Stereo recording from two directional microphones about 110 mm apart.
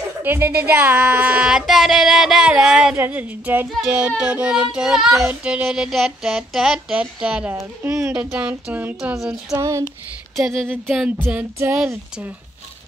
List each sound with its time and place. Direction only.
0.2 s child singing: 20° right (ahead or behind)
7.8 s music: 25° right (ahead or behind)
8.3 s child singing: 15° right (ahead or behind)
9.1 s a sound: 5° right (ahead or behind)
9.5 s music: 30° right (ahead or behind)
10.3 s a sound: centre (ahead or behind)
11.2 s music: 20° right (ahead or behind)